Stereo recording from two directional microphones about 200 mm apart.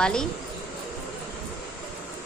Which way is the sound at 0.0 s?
5° left (ahead or behind).